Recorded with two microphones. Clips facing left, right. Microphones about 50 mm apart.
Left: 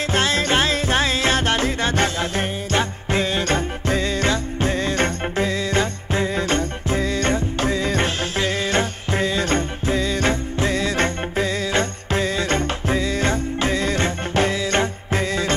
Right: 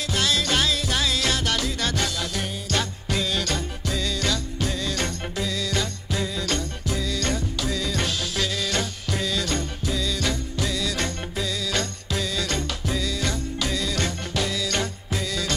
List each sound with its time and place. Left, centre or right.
0.1 s music: left